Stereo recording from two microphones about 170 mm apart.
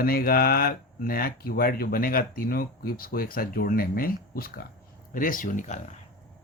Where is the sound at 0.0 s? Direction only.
60° left (ahead or behind).